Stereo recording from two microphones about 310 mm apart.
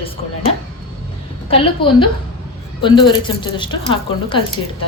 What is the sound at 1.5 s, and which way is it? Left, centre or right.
Speech, centre.